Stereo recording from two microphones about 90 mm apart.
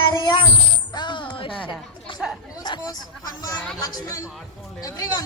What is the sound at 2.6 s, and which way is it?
Hubbub, 55° left (ahead or behind).